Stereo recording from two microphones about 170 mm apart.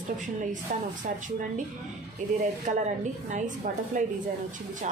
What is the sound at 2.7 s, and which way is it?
Stir, 45° right (ahead or behind).